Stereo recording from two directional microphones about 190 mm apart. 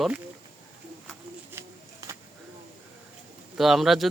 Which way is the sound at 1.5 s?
15° right (ahead or behind).